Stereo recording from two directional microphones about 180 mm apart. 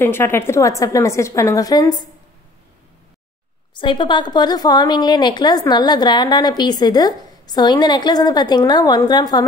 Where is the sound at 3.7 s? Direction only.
25° left (ahead or behind).